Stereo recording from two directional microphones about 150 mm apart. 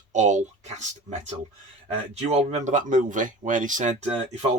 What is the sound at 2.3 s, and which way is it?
Speech, 50° right (ahead or behind).